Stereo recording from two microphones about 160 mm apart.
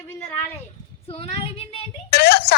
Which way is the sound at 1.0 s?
35° left (ahead or behind).